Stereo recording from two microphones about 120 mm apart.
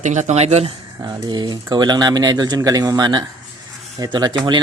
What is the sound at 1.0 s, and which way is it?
Speech, 35° right (ahead or behind).